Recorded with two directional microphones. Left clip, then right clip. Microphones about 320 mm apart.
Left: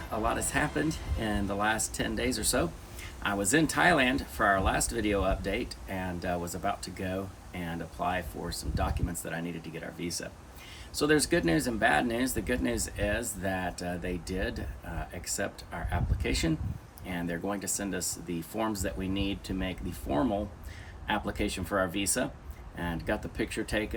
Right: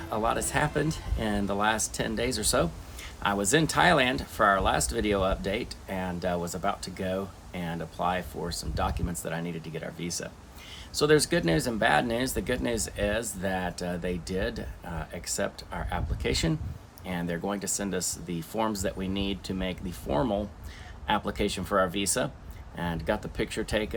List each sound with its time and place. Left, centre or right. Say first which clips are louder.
0.2 s speech: right 2 dB; centre